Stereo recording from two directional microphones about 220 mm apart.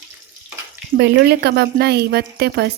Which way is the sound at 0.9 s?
50° right (ahead or behind).